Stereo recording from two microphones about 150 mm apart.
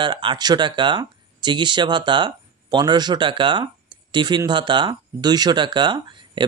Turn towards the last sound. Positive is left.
turn(degrees=-30)  # may be behind; listen again after turning